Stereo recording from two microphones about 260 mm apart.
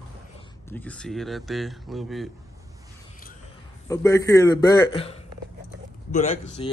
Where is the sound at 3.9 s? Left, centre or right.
Centre.